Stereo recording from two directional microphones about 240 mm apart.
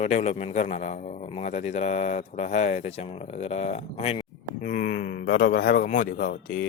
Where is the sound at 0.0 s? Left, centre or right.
Left.